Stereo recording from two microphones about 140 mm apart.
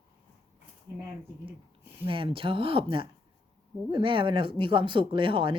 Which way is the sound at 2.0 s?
40° right (ahead or behind).